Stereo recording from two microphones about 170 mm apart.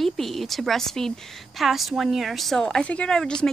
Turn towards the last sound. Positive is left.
turn(degrees=5)  # may be behind; listen again after turning